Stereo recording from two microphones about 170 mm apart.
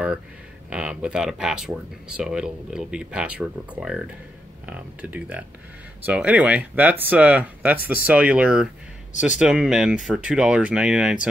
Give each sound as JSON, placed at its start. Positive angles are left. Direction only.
{"t": 0.7, "sound": "speech", "side_deg": -5}